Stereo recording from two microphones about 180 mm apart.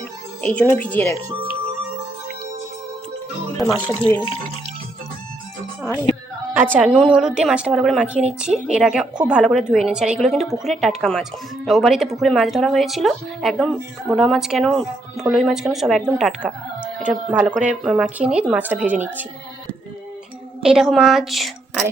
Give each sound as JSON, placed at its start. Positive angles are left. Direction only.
{"t": 0.4, "sound": "speech", "side_deg": 10}
{"t": 3.6, "sound": "speech", "side_deg": 5}
{"t": 6.7, "sound": "speech", "side_deg": -5}
{"t": 20.6, "sound": "speech", "side_deg": -5}